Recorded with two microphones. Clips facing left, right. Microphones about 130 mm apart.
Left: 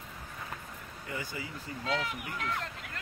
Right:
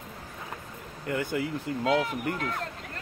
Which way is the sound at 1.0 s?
65° right (ahead or behind).